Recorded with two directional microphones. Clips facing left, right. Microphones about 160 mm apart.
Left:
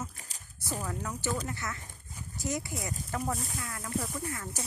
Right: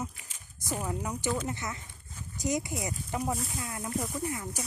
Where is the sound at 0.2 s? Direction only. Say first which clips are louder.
Left 2 dB; 40° left (ahead or behind).